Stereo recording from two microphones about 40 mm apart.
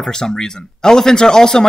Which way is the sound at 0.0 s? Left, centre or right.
Centre.